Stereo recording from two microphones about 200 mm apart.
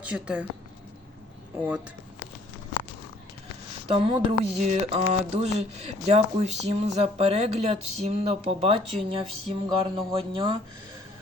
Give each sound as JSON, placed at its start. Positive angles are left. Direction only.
{"t": 0.0, "sound": "speech", "side_deg": -5}
{"t": 3.8, "sound": "speech", "side_deg": -30}